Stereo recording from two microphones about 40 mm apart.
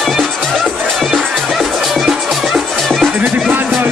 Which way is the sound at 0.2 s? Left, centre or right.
Centre.